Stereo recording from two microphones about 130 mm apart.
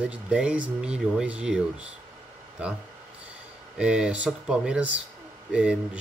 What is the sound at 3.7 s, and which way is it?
Speech, 5° right (ahead or behind).